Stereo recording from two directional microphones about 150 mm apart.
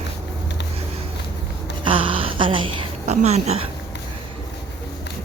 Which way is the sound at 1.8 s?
35° right (ahead or behind).